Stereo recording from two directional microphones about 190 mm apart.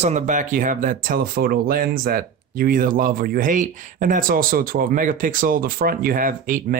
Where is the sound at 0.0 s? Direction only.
40° right (ahead or behind).